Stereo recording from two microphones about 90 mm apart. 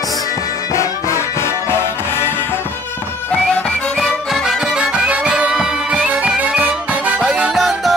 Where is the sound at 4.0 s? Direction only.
5° right (ahead or behind).